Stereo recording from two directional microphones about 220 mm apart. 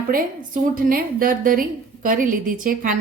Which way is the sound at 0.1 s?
40° right (ahead or behind).